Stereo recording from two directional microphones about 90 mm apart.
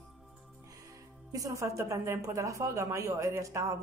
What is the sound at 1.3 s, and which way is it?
A woman's voice, 40° right (ahead or behind).